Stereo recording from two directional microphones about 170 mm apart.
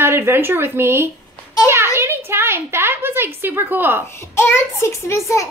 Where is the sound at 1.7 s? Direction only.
15° right (ahead or behind).